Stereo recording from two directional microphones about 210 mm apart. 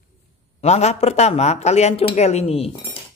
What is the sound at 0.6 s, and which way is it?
Speech, 30° left (ahead or behind).